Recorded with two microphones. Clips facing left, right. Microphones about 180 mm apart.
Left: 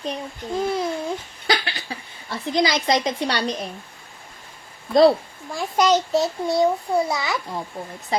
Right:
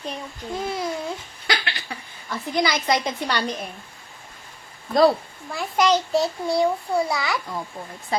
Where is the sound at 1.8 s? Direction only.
30° left (ahead or behind).